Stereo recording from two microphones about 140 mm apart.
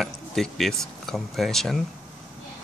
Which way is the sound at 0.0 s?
Centre (ahead or behind).